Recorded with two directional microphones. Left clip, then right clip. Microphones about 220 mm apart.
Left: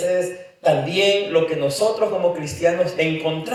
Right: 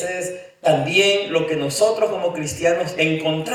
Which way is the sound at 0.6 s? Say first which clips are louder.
Right 1 dB; 30° right (ahead or behind).